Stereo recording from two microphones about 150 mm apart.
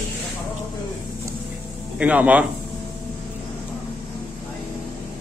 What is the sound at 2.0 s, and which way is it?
Speech, 10° right (ahead or behind).